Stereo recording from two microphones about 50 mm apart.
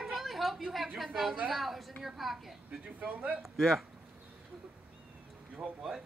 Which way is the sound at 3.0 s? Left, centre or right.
Right.